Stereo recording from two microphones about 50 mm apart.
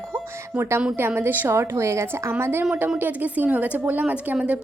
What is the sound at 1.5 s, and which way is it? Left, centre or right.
Speech, right.